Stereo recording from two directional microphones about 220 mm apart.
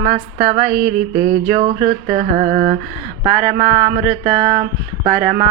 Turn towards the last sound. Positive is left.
turn(degrees=-30)  # may be behind; listen again after turning